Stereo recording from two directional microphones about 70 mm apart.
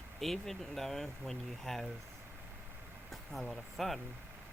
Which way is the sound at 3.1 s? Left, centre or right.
Centre.